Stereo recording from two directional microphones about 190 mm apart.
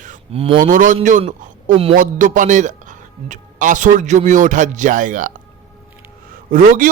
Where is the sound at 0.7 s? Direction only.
45° right (ahead or behind).